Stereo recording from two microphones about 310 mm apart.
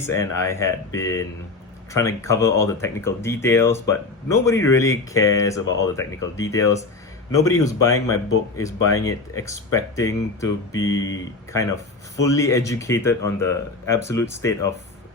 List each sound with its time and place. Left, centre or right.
0.0 s speech: centre
12.1 s speech: centre